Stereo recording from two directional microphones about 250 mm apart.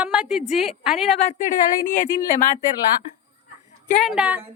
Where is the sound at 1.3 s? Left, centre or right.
Left.